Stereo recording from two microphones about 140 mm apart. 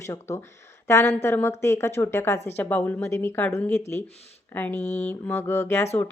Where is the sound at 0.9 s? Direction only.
20° left (ahead or behind).